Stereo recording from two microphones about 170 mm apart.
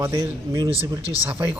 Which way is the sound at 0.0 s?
20° right (ahead or behind).